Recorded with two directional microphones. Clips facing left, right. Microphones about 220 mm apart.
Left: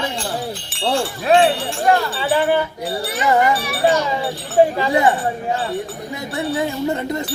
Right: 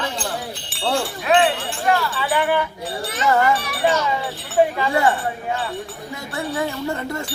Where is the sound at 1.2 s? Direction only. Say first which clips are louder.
Left 4 dB; 35° left (ahead or behind).